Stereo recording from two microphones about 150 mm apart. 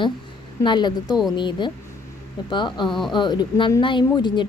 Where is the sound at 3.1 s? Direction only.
30° left (ahead or behind).